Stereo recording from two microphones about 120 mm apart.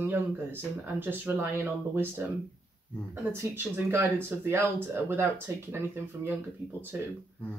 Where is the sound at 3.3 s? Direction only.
20° right (ahead or behind).